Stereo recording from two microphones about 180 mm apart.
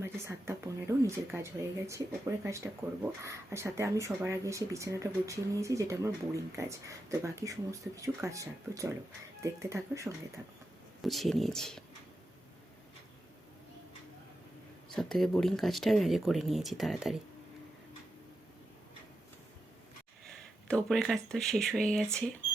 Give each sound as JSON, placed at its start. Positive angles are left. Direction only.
{"t": 0.0, "sound": "speech", "side_deg": -15}
{"t": 11.0, "sound": "speech", "side_deg": 0}
{"t": 14.8, "sound": "speech", "side_deg": 0}
{"t": 20.2, "sound": "speech", "side_deg": 5}